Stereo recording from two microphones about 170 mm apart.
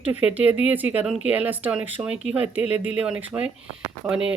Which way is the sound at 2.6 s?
40° left (ahead or behind).